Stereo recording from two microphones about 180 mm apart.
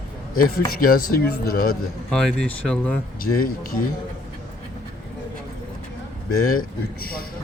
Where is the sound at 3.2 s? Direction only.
50° left (ahead or behind).